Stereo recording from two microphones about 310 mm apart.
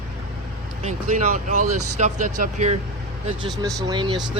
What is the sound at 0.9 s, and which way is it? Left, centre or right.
Speech, right.